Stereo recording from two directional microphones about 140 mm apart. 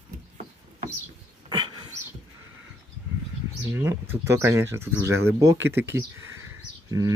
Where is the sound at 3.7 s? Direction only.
20° right (ahead or behind).